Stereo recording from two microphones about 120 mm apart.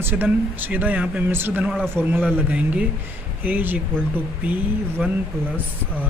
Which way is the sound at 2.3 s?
10° right (ahead or behind).